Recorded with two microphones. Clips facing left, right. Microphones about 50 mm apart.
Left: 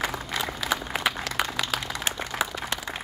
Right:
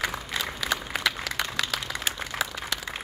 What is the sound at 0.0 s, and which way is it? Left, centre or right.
Applause, centre.